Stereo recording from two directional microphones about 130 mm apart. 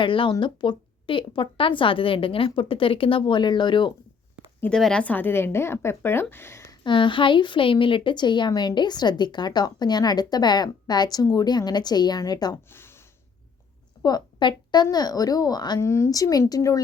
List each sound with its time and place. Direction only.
0.0 s a woman's voice: 40° left (ahead or behind)
4.6 s a woman's voice: 5° left (ahead or behind)
6.8 s a woman's voice: 40° left (ahead or behind)
12.7 s a sound: 20° left (ahead or behind)
14.0 s a woman's voice: 35° left (ahead or behind)
15.8 s speech: 20° left (ahead or behind)